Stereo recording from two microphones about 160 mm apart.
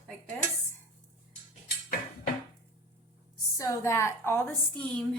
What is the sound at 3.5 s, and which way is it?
A woman's voice, 20° left (ahead or behind).